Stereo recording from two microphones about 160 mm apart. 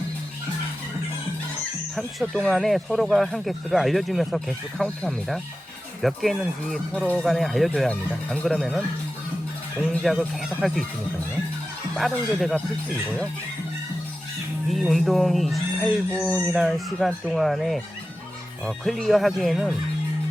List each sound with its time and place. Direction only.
2.0 s speech: centre (ahead or behind)
9.8 s speech: centre (ahead or behind)
11.9 s speech: centre (ahead or behind)
14.7 s speech: centre (ahead or behind)